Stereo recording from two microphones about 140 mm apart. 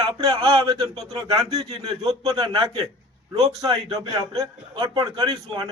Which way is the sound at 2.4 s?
35° right (ahead or behind).